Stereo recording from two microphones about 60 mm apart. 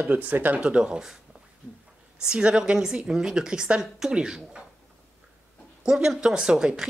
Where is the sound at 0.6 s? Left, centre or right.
Centre.